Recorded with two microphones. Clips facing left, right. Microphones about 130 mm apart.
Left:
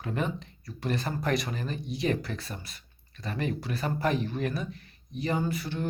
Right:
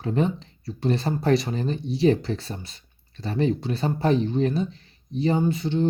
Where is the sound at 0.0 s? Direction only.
30° right (ahead or behind).